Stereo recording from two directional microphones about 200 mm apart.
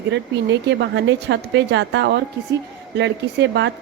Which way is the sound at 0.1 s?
60° right (ahead or behind).